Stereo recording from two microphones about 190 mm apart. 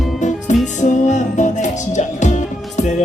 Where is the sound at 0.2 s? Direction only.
40° left (ahead or behind).